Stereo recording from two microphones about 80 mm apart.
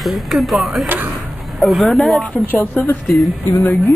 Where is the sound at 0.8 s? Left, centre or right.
Right.